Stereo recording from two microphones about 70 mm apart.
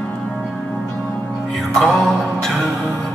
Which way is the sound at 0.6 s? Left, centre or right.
Centre.